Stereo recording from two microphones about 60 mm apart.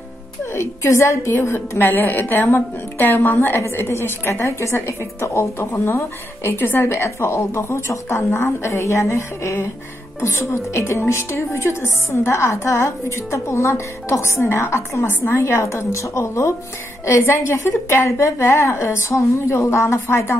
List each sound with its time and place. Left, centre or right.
0.6 s a woman's voice: left